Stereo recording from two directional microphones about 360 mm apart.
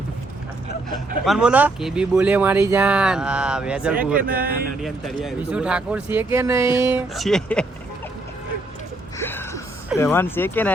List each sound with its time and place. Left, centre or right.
0.9 s speech: centre
4.2 s speech: right
4.8 s speech: centre
9.1 s a sound: centre